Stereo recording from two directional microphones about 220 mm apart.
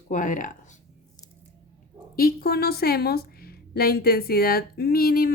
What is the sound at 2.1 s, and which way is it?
A woman's voice, 45° left (ahead or behind).